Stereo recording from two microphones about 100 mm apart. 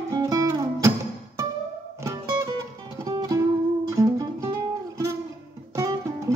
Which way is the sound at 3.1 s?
40° right (ahead or behind).